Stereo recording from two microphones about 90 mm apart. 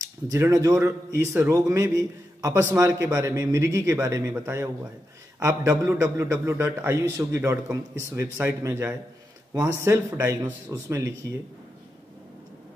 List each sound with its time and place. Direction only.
0.3 s a man's voice: 35° right (ahead or behind)